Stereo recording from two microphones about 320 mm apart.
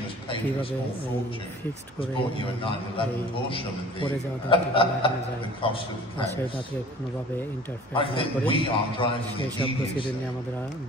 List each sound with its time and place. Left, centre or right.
2.0 s a man's voice: centre
7.9 s a man's voice: centre